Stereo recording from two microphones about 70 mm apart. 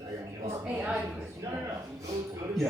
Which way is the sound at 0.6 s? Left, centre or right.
Centre.